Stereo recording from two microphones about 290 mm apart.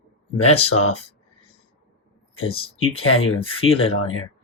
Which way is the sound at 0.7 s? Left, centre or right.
Left.